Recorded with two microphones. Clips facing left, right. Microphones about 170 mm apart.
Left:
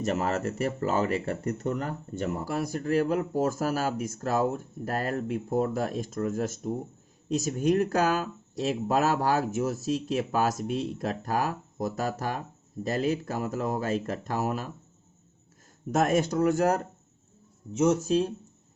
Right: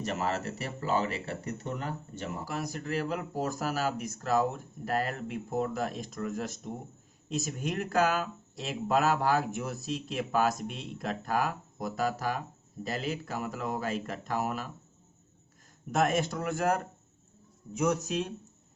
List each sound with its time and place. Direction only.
0.0 s speech: 40° left (ahead or behind)
15.9 s speech: 40° left (ahead or behind)
17.7 s speech: 25° left (ahead or behind)